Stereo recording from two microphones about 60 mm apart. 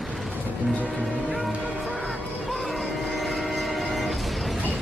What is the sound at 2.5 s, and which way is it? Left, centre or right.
Train, centre.